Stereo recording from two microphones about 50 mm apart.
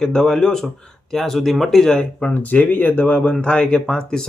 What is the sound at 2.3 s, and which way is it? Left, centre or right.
Speech, left.